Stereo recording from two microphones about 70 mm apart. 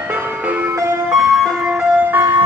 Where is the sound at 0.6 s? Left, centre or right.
Right.